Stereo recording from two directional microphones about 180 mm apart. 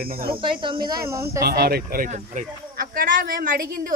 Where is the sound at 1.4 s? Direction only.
60° right (ahead or behind).